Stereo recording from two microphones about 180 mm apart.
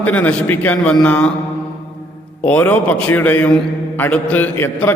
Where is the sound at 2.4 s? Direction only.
10° left (ahead or behind).